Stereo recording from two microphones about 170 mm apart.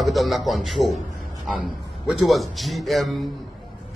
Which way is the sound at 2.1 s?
Centre (ahead or behind).